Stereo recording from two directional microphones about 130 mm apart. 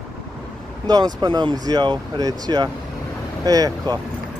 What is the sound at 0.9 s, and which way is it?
Speech, 30° right (ahead or behind).